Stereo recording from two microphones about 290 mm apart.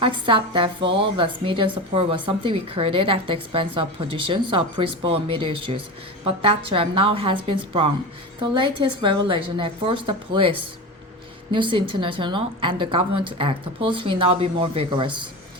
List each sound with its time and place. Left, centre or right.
0.0 s a woman's voice: centre
11.5 s a woman's voice: centre